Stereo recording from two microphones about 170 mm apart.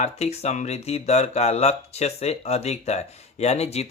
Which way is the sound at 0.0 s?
40° left (ahead or behind).